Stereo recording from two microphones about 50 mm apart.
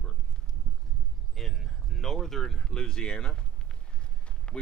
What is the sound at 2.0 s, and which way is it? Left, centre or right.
Speech, centre.